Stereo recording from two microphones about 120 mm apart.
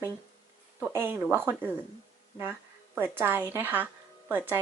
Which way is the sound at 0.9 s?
20° right (ahead or behind).